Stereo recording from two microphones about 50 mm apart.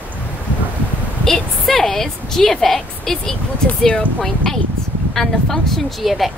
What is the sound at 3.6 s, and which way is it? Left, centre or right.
Speech, left.